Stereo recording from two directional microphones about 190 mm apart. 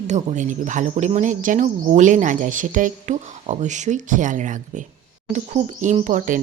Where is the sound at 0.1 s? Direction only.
40° right (ahead or behind).